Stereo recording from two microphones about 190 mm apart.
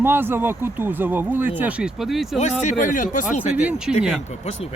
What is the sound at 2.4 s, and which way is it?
Speech, 35° left (ahead or behind).